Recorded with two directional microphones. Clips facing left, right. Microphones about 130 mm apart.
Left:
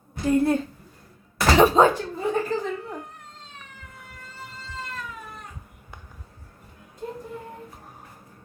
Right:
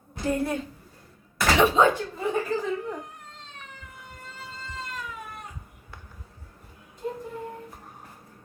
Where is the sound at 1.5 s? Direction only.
40° left (ahead or behind).